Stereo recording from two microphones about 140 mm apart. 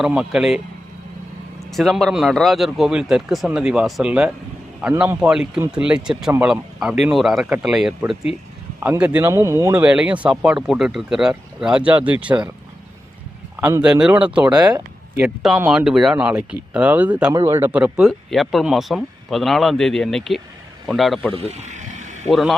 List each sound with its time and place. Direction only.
0.0 s speech: 5° right (ahead or behind)
1.7 s speech: centre (ahead or behind)
9.2 s speech: 20° right (ahead or behind)
9.8 s speech: 10° right (ahead or behind)
13.8 s speech: 5° right (ahead or behind)
14.5 s speech: 30° right (ahead or behind)
15.2 s speech: 10° right (ahead or behind)
21.3 s a sound: 50° right (ahead or behind)
22.3 s speech: centre (ahead or behind)